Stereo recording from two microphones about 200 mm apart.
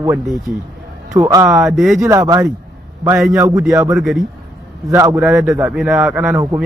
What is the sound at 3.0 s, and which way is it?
A man's voice, 5° right (ahead or behind).